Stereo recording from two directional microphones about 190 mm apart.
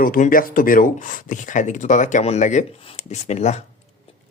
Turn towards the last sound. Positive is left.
turn(degrees=35)  # may be behind; listen again after turning